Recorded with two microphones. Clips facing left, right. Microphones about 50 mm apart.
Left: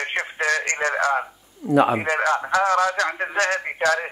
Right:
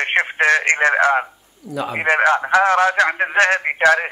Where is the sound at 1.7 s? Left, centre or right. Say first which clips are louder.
Left 8 dB; left.